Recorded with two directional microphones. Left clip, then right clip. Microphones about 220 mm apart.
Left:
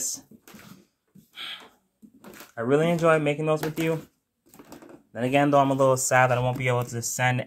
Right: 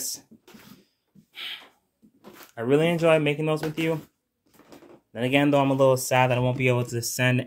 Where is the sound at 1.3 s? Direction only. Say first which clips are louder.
Right 1 dB; 20° right (ahead or behind).